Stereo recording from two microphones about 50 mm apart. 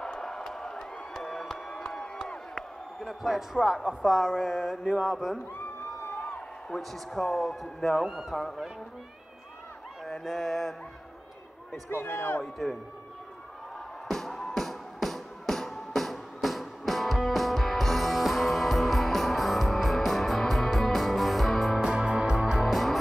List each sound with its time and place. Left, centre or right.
0.0 s crowd: centre
3.1 s speech: centre
6.7 s speech: centre
8.0 s speech: centre
10.0 s speech: centre
11.9 s a man's voice: left
14.0 s music: centre
21.8 s music: centre
22.6 s music: centre